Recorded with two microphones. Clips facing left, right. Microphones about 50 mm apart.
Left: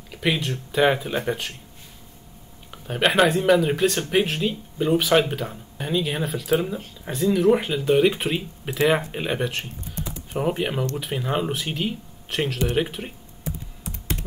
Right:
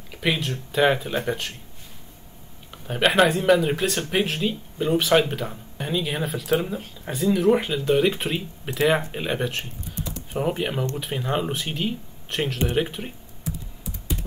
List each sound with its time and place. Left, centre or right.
0.1 s speech: centre
2.7 s speech: centre
13.8 s computer keyboard: left